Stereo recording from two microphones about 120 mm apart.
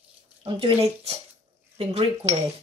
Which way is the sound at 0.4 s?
45° right (ahead or behind).